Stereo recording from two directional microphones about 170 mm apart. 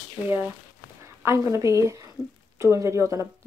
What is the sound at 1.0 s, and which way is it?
A woman's voice, 15° right (ahead or behind).